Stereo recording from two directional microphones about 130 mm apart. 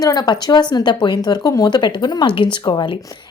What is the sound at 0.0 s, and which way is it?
A woman's voice, 30° left (ahead or behind).